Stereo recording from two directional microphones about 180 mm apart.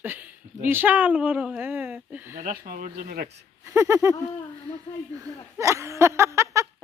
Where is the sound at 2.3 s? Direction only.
50° right (ahead or behind).